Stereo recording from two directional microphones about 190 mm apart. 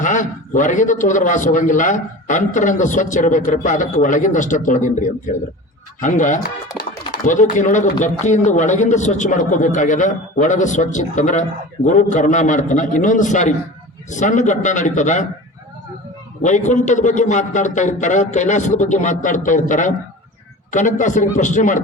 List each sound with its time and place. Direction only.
0.0 s a man's voice: 40° left (ahead or behind)
16.4 s a man's voice: 40° left (ahead or behind)